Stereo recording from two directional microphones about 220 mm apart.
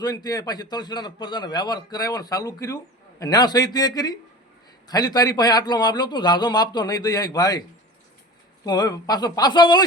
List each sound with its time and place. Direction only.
0.0 s a man's voice: 15° left (ahead or behind)
8.6 s speech: 20° left (ahead or behind)